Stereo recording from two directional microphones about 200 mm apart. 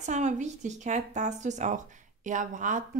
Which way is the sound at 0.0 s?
35° right (ahead or behind).